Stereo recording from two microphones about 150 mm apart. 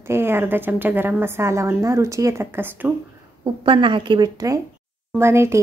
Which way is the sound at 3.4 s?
35° right (ahead or behind).